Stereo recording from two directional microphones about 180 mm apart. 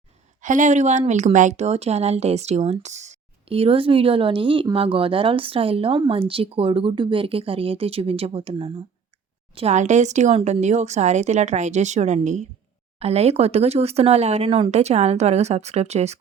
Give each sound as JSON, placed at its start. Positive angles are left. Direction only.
{"t": 0.4, "sound": "speech", "side_deg": -45}